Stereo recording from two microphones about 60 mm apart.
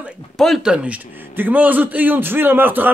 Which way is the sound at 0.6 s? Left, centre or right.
Centre.